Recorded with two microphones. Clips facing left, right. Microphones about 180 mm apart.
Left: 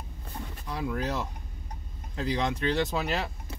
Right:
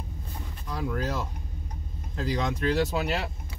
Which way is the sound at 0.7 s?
Centre (ahead or behind).